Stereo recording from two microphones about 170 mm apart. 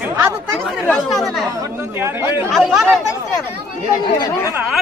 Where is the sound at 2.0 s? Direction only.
15° right (ahead or behind).